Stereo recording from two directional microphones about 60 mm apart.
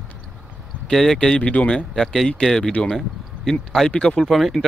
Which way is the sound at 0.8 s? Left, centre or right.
Centre.